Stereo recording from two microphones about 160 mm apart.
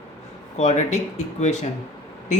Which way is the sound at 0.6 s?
45° left (ahead or behind).